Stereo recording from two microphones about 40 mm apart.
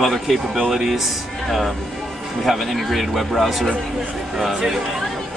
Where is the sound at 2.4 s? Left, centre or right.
Centre.